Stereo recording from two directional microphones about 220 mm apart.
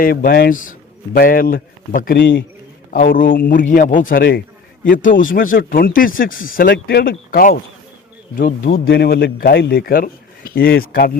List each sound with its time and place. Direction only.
0.0 s a man's voice: 40° left (ahead or behind)